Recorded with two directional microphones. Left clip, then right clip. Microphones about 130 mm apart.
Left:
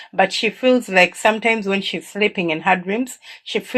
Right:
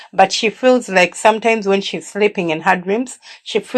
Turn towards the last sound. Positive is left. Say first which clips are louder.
# right 4 dB
turn(degrees=-25)  # may be behind; listen again after turning